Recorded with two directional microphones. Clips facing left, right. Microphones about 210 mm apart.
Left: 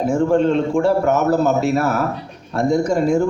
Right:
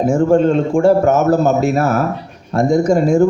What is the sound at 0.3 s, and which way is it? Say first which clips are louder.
Speech: right 3 dB; 45° right (ahead or behind).